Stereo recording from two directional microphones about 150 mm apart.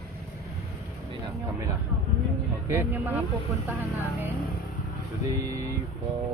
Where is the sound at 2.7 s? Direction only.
15° right (ahead or behind).